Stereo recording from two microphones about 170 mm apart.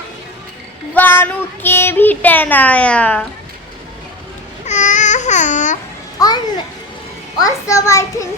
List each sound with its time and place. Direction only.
0.9 s speech: 15° left (ahead or behind)
4.6 s babbling: 45° left (ahead or behind)
6.1 s children playing: 25° left (ahead or behind)
7.3 s a child's voice: 20° left (ahead or behind)